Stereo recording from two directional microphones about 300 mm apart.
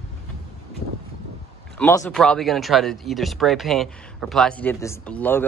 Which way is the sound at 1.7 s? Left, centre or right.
Centre.